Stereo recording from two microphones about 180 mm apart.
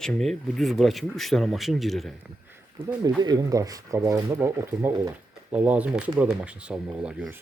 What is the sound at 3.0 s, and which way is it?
Speech, 20° right (ahead or behind).